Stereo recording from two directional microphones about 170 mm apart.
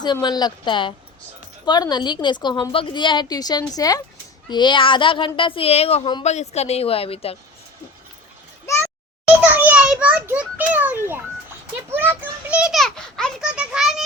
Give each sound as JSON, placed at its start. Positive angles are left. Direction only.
{"t": 0.0, "sound": "a woman's voice", "side_deg": 25}
{"t": 9.6, "sound": "a sound", "side_deg": -10}
{"t": 11.9, "sound": "a child's voice", "side_deg": -10}